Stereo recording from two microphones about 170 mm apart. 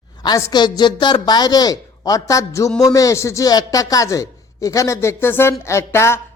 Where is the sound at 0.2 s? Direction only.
20° left (ahead or behind).